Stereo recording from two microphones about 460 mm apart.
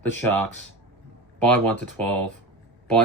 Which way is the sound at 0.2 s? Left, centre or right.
Centre.